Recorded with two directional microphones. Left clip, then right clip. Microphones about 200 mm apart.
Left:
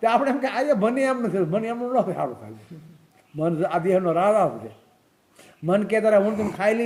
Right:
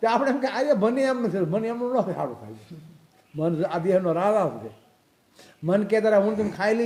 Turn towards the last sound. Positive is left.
turn(degrees=-20)  # may be behind; listen again after turning